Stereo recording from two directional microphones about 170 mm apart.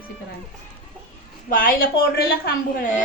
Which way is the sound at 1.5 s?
55° left (ahead or behind).